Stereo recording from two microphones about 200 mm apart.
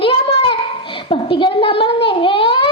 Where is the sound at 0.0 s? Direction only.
30° left (ahead or behind).